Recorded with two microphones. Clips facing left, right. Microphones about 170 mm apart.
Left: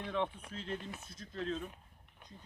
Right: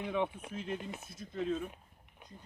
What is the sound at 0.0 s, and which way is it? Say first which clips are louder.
Speech: right 2 dB; 10° right (ahead or behind).